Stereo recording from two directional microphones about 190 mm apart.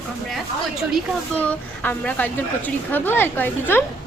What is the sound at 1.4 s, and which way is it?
A woman's voice, 10° left (ahead or behind).